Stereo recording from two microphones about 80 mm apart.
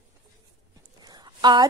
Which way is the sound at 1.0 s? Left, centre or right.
Right.